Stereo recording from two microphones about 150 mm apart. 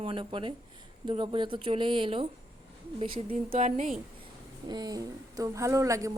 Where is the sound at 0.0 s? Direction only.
35° right (ahead or behind).